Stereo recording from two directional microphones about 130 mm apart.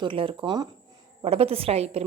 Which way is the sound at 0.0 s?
40° right (ahead or behind).